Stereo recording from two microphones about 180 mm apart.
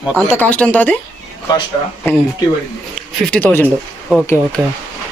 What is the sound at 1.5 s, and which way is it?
Speech, 20° left (ahead or behind).